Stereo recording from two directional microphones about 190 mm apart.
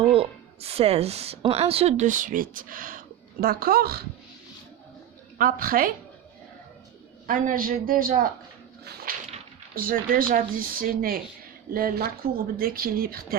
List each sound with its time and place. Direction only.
0.0 s speech: 30° right (ahead or behind); by 4.0 s 55° right (ahead or behind)
5.4 s speech: 50° right (ahead or behind)
7.3 s speech: 45° right (ahead or behind)
8.8 s a sound: 55° right (ahead or behind)
9.7 s speech: 50° right (ahead or behind)